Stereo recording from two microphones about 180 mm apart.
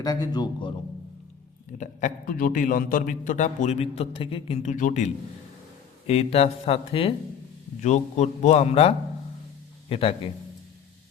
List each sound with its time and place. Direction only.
0.0 s a man's voice: 20° left (ahead or behind)
1.8 s a man's voice: 45° left (ahead or behind)
9.9 s a man's voice: 30° left (ahead or behind)